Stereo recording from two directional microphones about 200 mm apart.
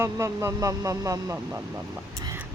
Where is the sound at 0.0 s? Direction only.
15° right (ahead or behind).